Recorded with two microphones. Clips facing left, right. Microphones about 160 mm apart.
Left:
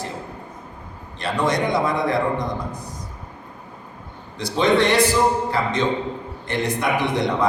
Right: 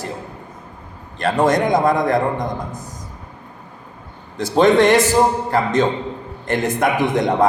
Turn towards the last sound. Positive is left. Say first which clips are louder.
# right 5 dB
turn(degrees=-50)  # may be behind; listen again after turning